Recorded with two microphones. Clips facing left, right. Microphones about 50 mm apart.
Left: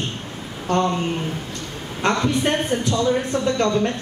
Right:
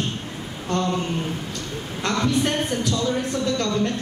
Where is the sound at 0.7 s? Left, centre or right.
Left.